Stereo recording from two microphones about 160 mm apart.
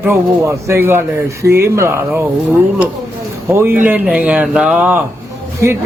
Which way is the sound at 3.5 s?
15° right (ahead or behind).